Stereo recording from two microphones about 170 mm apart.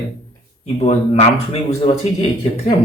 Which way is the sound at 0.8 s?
35° left (ahead or behind).